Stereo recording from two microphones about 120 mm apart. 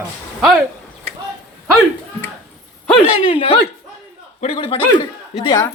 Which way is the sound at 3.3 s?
50° left (ahead or behind).